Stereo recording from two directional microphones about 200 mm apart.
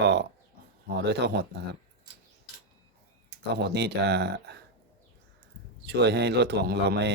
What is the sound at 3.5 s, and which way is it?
Speech, 55° right (ahead or behind).